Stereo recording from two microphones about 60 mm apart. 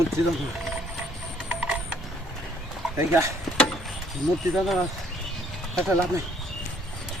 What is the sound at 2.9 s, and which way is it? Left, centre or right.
Speech, right.